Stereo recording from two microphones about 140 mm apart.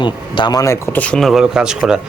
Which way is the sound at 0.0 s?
35° left (ahead or behind).